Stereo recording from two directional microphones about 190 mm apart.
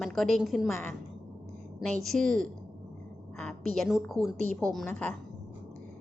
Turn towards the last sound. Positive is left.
turn(degrees=5)  # may be behind; listen again after turning